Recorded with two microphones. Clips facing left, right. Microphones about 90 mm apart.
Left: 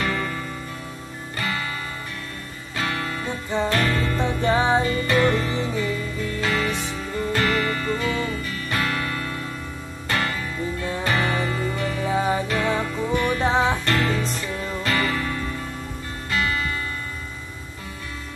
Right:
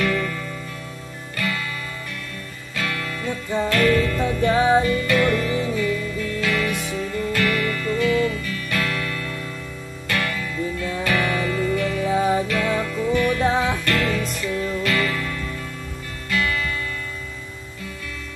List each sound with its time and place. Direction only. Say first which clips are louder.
0.0 s music: right 3 dB; 30° left (ahead or behind)
1.3 s music: right 1 dB; 30° left (ahead or behind)
2.7 s music: left 1 dB; 30° left (ahead or behind)